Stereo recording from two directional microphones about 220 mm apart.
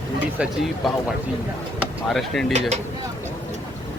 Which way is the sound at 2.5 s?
30° right (ahead or behind).